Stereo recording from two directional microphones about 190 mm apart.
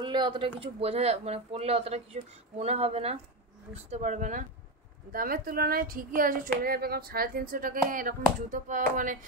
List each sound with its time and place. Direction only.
0.0 s speech: 25° right (ahead or behind); by 9.2 s 45° right (ahead or behind)